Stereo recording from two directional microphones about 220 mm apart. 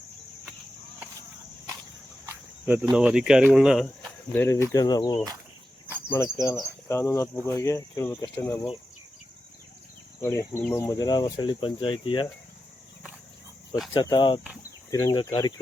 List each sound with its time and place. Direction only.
2.2 s cricket: 10° right (ahead or behind)
2.9 s speech: 5° right (ahead or behind)
4.4 s speech: 10° left (ahead or behind)
10.2 s speech: 10° left (ahead or behind)
13.9 s speech: 20° left (ahead or behind)